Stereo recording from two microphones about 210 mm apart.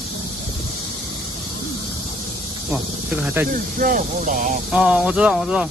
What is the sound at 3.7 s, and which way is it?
Speech, 40° right (ahead or behind).